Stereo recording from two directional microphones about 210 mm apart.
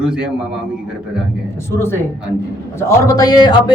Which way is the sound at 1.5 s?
10° left (ahead or behind).